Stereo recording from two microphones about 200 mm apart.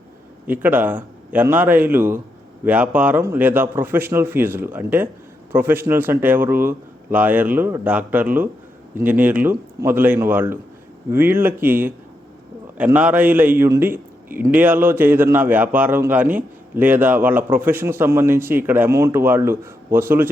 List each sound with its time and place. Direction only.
0.4 s a man's voice: 10° right (ahead or behind)